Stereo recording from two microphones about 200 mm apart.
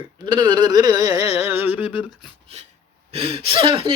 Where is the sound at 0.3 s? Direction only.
20° right (ahead or behind).